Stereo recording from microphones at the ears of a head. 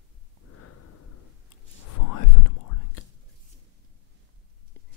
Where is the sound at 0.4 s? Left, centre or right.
Left.